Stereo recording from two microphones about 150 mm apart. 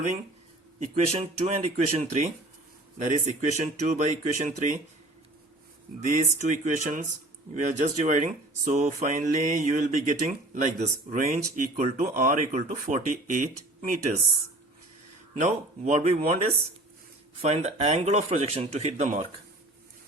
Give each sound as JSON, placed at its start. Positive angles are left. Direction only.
{"t": 0.8, "sound": "speech", "side_deg": -45}
{"t": 6.0, "sound": "speech", "side_deg": -55}
{"t": 15.4, "sound": "speech", "side_deg": -50}
{"t": 17.4, "sound": "speech", "side_deg": -45}